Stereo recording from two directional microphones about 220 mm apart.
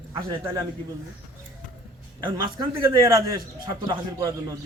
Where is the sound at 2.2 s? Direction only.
20° right (ahead or behind).